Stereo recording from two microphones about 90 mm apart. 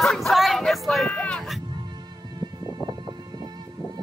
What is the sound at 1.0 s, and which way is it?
Music, 15° left (ahead or behind).